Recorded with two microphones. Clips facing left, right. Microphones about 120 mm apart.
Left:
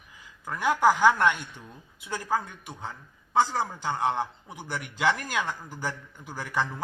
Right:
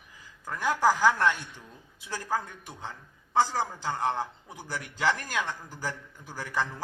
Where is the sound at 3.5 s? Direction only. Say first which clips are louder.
Left 1 dB; 25° left (ahead or behind).